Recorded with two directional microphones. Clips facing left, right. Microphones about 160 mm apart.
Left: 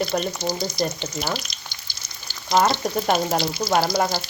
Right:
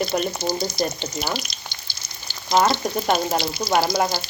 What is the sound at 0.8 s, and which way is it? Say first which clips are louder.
Speech: left 1 dB; 35° right (ahead or behind).